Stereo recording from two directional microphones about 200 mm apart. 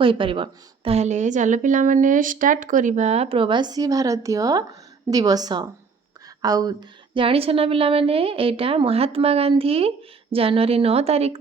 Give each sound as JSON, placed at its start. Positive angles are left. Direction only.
{"t": 0.0, "sound": "a woman's voice", "side_deg": -25}